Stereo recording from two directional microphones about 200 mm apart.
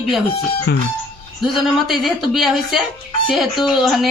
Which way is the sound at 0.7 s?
55° left (ahead or behind).